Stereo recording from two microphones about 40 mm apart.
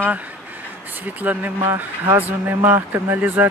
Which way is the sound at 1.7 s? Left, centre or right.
Right.